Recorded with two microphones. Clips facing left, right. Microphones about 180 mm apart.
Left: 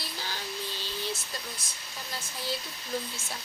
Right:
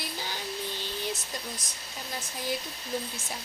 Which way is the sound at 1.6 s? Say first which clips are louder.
Right 1 dB; 20° right (ahead or behind).